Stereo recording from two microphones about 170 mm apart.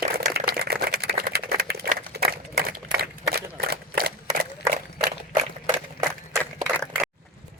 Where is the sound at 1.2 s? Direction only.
60° right (ahead or behind).